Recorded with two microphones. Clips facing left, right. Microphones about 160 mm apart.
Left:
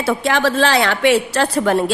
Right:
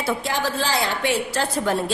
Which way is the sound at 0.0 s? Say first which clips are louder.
Left 7 dB; 85° left.